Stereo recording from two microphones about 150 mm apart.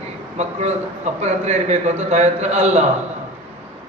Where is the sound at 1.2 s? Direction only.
45° right (ahead or behind).